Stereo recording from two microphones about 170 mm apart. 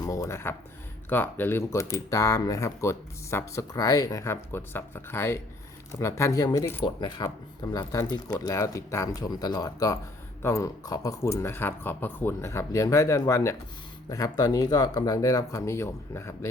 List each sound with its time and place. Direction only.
0.0 s speech: 20° left (ahead or behind)